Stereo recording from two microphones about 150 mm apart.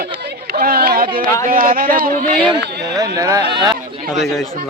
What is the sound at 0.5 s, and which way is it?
Chatter, 85° right.